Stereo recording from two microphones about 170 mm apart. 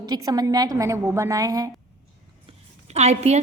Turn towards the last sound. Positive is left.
turn(degrees=-40)  # may be behind; listen again after turning